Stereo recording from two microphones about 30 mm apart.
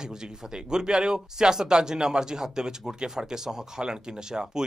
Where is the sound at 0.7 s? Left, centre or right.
Right.